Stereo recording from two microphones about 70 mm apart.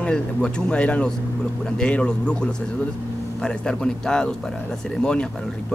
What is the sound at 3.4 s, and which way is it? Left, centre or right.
Speech, centre.